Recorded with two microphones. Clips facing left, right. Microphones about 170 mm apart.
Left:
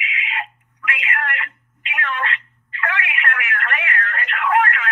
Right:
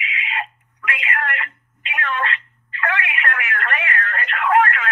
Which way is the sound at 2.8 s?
35° right (ahead or behind).